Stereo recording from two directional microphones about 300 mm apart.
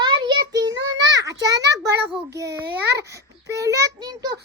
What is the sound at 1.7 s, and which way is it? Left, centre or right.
Speech, right.